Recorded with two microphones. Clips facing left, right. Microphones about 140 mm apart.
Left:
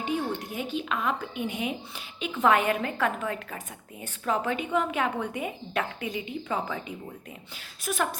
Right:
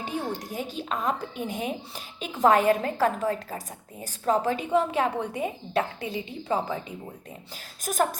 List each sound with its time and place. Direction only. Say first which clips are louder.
0.0 s a woman's voice: left 2 dB; 35° right (ahead or behind)
7.9 s speech: right 3 dB; 45° right (ahead or behind)